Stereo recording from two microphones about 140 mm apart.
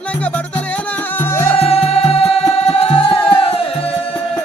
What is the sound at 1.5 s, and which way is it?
Music, 45° left (ahead or behind).